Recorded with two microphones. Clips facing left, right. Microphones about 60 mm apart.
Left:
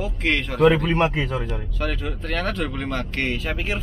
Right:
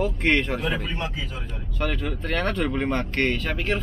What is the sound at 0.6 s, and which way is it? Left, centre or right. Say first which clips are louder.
Speech: left 11 dB; left.